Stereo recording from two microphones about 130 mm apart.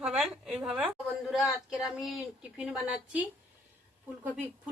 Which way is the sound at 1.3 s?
Centre (ahead or behind).